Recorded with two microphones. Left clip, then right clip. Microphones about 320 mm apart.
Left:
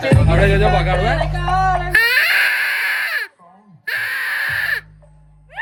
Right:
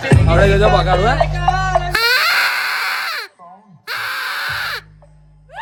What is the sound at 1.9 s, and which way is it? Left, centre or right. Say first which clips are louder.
Baby cry: left 1 dB; centre.